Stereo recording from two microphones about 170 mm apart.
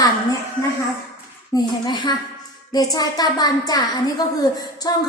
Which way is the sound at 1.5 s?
25° left (ahead or behind).